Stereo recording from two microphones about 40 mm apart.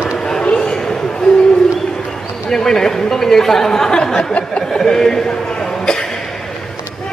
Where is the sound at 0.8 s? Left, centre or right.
Centre.